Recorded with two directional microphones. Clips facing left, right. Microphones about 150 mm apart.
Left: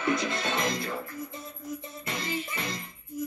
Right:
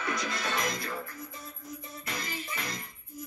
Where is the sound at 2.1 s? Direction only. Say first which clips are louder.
Left 5 dB; 25° left (ahead or behind).